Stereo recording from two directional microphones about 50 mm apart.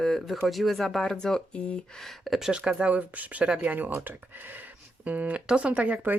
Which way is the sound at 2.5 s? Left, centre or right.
Right.